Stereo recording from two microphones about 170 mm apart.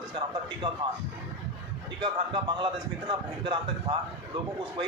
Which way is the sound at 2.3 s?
30° right (ahead or behind).